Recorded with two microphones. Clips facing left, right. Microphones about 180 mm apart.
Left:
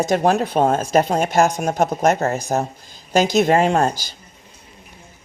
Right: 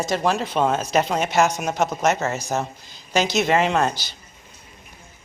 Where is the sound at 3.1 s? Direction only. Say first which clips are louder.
Left 4 dB; 50° left (ahead or behind).